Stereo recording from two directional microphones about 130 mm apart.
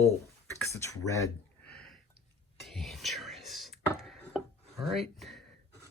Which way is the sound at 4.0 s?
Centre (ahead or behind).